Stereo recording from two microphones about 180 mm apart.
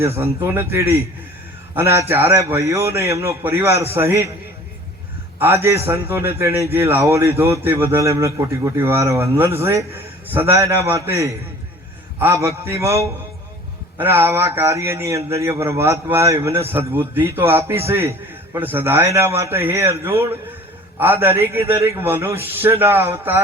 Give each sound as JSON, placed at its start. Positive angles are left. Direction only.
{"t": 0.4, "sound": "a man's voice", "side_deg": -15}
{"t": 5.4, "sound": "a man's voice", "side_deg": -15}